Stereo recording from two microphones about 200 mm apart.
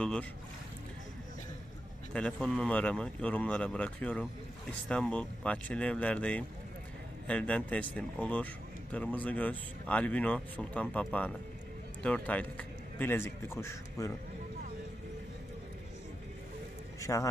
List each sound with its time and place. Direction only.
0.0 s speech: 5° left (ahead or behind)
2.1 s speech: 5° left (ahead or behind)
17.0 s a man's voice: 15° left (ahead or behind)